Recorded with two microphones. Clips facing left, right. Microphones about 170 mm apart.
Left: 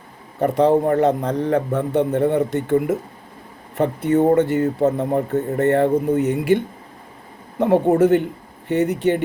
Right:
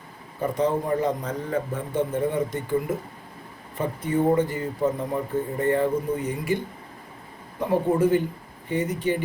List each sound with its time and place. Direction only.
0.3 s a man's voice: 70° left (ahead or behind)
7.6 s a man's voice: 75° left (ahead or behind)